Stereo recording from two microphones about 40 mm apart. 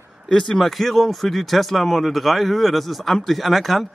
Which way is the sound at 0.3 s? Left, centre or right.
Centre.